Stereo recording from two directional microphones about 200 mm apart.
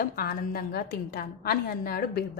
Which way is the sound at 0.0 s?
45° left (ahead or behind).